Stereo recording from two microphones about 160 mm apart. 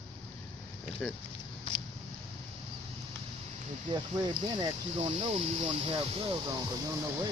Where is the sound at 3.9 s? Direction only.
30° right (ahead or behind).